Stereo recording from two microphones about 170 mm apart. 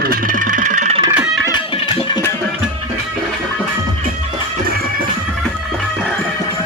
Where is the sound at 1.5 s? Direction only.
30° left (ahead or behind).